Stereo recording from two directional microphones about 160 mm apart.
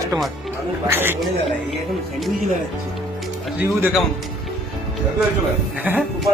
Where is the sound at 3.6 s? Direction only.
15° right (ahead or behind).